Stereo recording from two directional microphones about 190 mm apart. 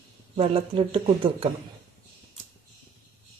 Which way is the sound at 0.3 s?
30° right (ahead or behind).